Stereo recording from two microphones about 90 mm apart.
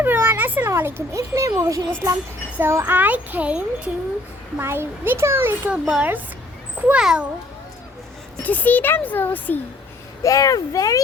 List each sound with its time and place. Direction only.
0.0 s a sound: 25° right (ahead or behind)
0.7 s speech: 25° right (ahead or behind)
1.1 s speech: 35° right (ahead or behind)
2.6 s a child's voice: 25° right (ahead or behind)
4.5 s a child's voice: 25° right (ahead or behind)
5.7 s speech: 10° right (ahead or behind)
8.4 s a child's voice: 20° left (ahead or behind)
10.2 s speech: 40° left (ahead or behind)